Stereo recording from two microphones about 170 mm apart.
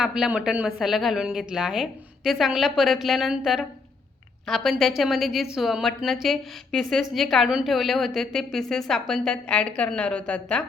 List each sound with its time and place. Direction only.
0.0 s a woman's voice: 5° right (ahead or behind)